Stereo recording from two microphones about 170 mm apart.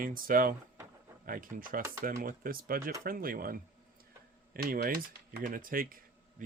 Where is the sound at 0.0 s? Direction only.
55° right (ahead or behind).